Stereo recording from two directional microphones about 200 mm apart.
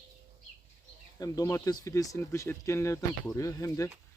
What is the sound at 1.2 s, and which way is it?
Speech, 15° left (ahead or behind).